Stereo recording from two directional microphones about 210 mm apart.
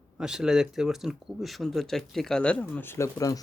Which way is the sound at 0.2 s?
5° right (ahead or behind).